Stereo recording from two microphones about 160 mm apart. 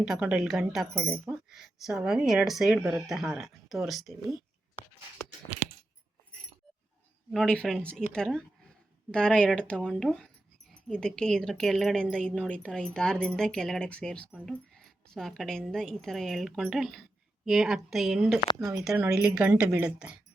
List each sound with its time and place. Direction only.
0.0 s speech: 5° right (ahead or behind)
7.3 s speech: 5° left (ahead or behind)
18.6 s speech: 20° right (ahead or behind)
18.9 s a woman's voice: 5° right (ahead or behind)